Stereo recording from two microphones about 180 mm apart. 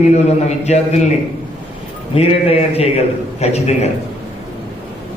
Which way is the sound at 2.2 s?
35° left (ahead or behind).